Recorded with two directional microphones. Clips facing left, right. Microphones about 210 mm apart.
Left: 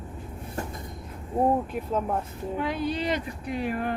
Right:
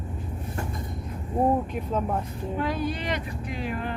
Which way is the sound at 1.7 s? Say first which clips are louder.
Even; 5° left (ahead or behind).